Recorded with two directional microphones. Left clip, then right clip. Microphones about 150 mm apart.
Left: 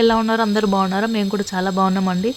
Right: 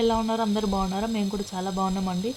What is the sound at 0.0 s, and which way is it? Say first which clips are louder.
Speech: left 8 dB; 25° left (ahead or behind).